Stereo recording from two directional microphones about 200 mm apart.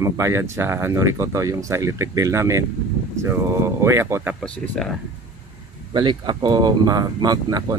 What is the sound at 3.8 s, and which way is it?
Speech, 15° right (ahead or behind).